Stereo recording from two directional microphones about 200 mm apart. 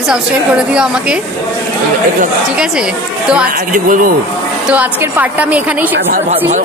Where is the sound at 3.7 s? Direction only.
40° right (ahead or behind).